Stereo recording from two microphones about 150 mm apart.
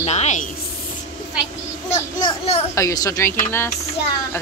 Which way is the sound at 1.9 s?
20° left (ahead or behind).